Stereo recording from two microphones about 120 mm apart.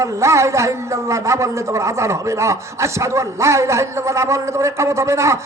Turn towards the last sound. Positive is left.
turn(degrees=-25)  # may be behind; listen again after turning